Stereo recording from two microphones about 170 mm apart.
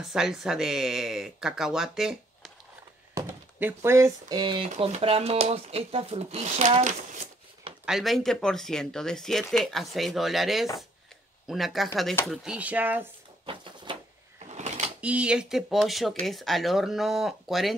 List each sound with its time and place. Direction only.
0.0 s speech: 5° right (ahead or behind)
3.2 s speech: 15° right (ahead or behind)
4.6 s speech: 40° right (ahead or behind)
7.8 s speech: centre (ahead or behind)
13.5 s a sound: 30° right (ahead or behind)
14.5 s a sound: 45° right (ahead or behind)
15.0 s speech: 5° right (ahead or behind)